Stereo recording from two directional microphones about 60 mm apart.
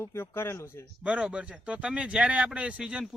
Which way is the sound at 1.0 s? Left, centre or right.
Centre.